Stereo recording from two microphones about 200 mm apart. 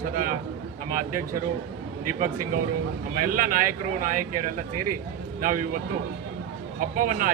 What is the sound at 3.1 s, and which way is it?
Speech, 45° right (ahead or behind).